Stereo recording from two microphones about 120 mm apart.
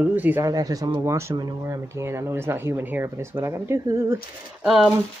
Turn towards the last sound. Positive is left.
turn(degrees=0)  # may be behind; listen again after turning